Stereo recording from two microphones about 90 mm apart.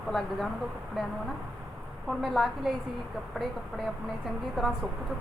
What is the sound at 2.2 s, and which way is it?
Speech, centre (ahead or behind).